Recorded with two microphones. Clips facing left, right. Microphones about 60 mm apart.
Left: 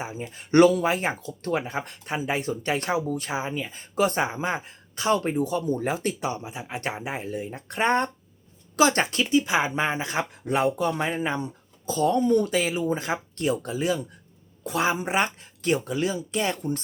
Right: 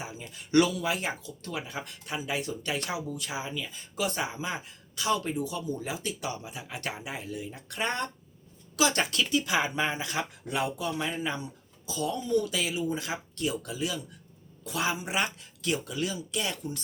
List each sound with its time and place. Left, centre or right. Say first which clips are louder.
0.0 s speech: left 6 dB; left
6.1 s speech: left 6 dB; left